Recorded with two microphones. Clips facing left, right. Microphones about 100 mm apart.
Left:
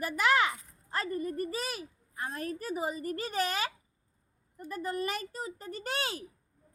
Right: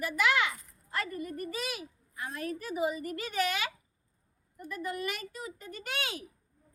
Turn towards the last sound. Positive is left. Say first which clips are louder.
# left 2 dB
turn(degrees=35)  # may be behind; listen again after turning